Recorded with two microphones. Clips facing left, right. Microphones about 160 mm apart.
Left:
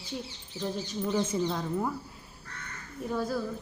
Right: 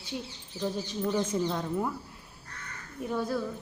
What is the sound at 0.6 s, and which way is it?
Speech, centre (ahead or behind).